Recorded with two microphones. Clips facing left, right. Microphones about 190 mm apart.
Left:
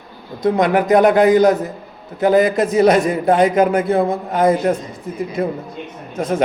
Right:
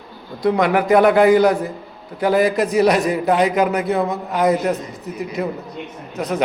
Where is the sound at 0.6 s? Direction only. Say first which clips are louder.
Left 1 dB; 40° left (ahead or behind).